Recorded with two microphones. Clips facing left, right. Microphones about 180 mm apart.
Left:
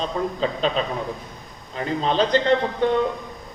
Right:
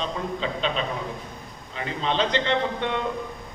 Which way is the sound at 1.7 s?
40° left (ahead or behind).